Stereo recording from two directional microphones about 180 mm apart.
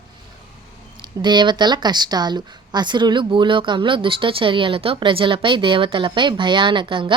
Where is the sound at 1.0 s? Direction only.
25° right (ahead or behind).